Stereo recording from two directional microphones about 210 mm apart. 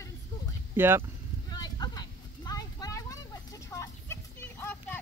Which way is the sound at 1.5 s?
20° left (ahead or behind).